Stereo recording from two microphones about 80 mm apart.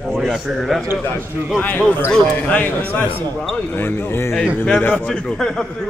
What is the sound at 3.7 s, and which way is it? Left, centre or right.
Speech, left.